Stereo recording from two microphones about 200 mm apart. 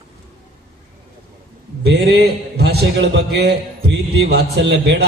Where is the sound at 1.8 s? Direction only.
55° right (ahead or behind).